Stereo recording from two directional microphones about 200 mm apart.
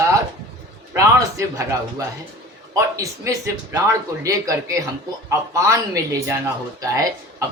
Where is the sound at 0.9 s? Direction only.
15° right (ahead or behind).